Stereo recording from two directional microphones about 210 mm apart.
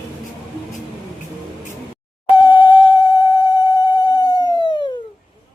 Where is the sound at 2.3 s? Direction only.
20° left (ahead or behind).